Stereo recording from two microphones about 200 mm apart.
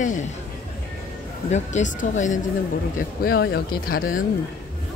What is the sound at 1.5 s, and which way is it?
Speech, 35° left (ahead or behind).